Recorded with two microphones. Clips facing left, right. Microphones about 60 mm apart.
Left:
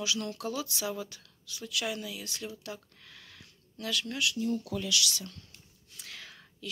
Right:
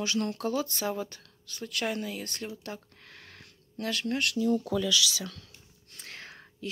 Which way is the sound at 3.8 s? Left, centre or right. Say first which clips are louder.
Right 3 dB; right.